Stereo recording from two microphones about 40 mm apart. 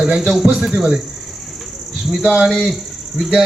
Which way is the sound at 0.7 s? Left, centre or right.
Centre.